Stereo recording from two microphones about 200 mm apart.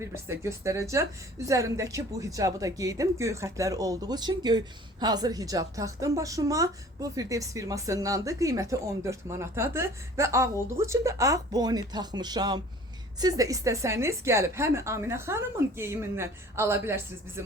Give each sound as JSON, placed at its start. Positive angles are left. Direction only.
{"t": 0.0, "sound": "speech", "side_deg": -15}